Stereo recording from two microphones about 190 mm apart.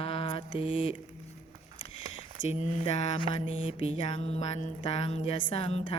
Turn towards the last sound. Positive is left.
turn(degrees=30)  # may be behind; listen again after turning